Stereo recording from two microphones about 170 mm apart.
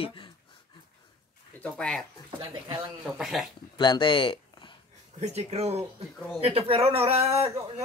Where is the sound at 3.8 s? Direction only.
25° left (ahead or behind).